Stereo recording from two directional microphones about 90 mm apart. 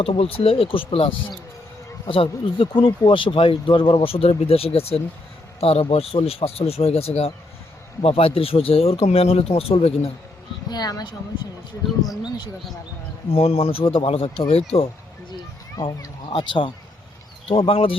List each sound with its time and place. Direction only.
0.0 s speech: 90° left
2.0 s speech: 75° left (ahead or behind); by 10.1 s 90° left
10.7 s speech: 45° left (ahead or behind)
13.3 s speech: 90° left
16.3 s speech: 65° left (ahead or behind)
17.5 s speech: 85° left